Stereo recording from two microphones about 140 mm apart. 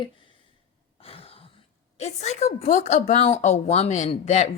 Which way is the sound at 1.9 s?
50° left (ahead or behind).